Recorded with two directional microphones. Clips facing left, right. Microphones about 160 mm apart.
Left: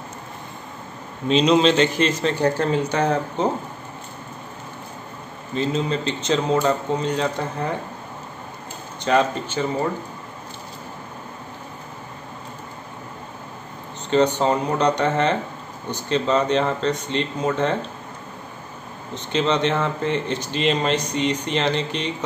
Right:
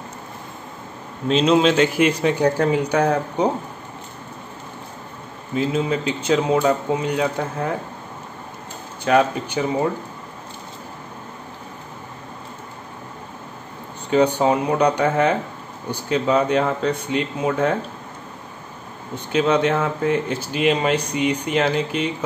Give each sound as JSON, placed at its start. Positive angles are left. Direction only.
{"t": 1.2, "sound": "speech", "side_deg": -5}
{"t": 5.5, "sound": "speech", "side_deg": -5}
{"t": 9.0, "sound": "speech", "side_deg": -10}
{"t": 14.1, "sound": "speech", "side_deg": -10}
{"t": 19.1, "sound": "speech", "side_deg": -10}